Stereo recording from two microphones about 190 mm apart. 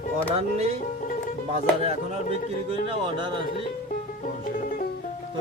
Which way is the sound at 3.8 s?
45° left (ahead or behind).